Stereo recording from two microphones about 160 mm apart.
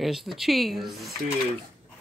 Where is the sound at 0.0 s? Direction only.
Centre (ahead or behind).